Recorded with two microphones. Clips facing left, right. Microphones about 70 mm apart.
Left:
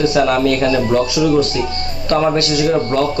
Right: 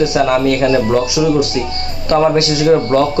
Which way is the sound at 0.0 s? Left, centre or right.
Centre.